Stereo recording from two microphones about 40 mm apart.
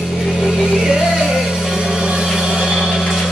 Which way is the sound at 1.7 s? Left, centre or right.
Centre.